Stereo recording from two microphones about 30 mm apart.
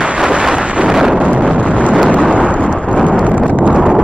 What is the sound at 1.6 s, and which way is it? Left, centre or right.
Eruption, right.